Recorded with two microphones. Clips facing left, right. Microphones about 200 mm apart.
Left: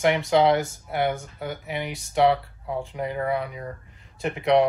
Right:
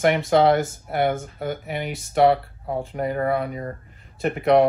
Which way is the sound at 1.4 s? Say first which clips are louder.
Right 2 dB; 55° right (ahead or behind).